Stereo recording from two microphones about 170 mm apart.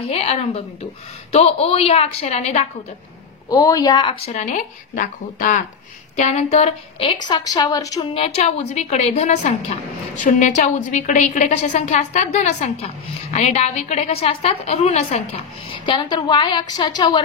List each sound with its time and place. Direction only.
0.0 s a woman's voice: 35° left (ahead or behind)
3.4 s a woman's voice: 20° left (ahead or behind)
4.3 s a woman's voice: 45° left (ahead or behind); by 8.1 s 20° left (ahead or behind)
8.1 s a woman's voice: 35° left (ahead or behind)